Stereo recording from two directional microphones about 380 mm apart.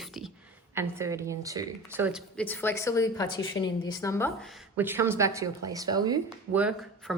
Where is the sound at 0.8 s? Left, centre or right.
Centre.